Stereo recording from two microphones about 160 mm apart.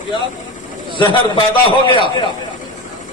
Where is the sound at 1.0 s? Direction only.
30° left (ahead or behind).